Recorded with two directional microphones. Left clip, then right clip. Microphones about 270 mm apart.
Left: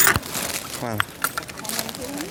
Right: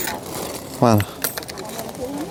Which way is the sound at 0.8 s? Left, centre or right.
Right.